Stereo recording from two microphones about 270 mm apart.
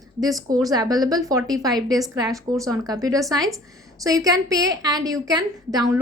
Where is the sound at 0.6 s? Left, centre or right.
Centre.